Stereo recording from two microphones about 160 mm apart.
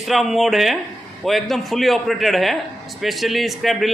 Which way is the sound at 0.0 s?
Centre (ahead or behind).